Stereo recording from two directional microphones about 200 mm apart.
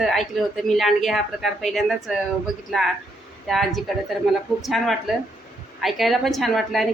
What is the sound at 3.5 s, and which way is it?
Speech, centre (ahead or behind).